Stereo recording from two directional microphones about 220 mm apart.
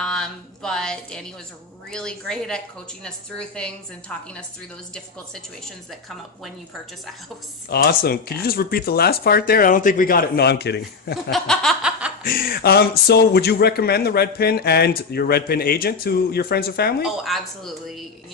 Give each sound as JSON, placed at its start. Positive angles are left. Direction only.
{"t": 0.0, "sound": "a sound", "side_deg": 5}
{"t": 1.9, "sound": "a woman's voice", "side_deg": 5}
{"t": 5.9, "sound": "a woman's voice", "side_deg": 0}
{"t": 7.7, "sound": "speech", "side_deg": 45}
{"t": 11.2, "sound": "a sound", "side_deg": 0}
{"t": 12.2, "sound": "speech", "side_deg": 40}
{"t": 17.0, "sound": "a woman's voice", "side_deg": 0}